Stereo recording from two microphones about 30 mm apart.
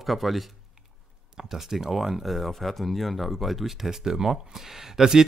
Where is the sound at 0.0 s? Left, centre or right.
Centre.